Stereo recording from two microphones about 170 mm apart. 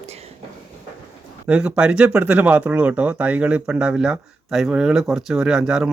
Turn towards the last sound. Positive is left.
turn(degrees=-5)  # may be behind; listen again after turning